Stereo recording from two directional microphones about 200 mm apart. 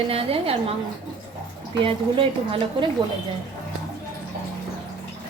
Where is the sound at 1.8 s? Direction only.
25° right (ahead or behind).